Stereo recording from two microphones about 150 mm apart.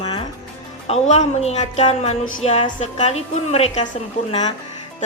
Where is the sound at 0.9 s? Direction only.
45° left (ahead or behind).